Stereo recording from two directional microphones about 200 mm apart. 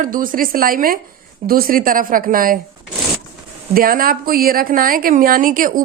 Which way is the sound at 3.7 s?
45° right (ahead or behind).